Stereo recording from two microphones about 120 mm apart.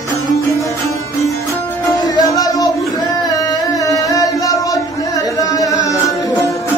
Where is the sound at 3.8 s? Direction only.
30° left (ahead or behind).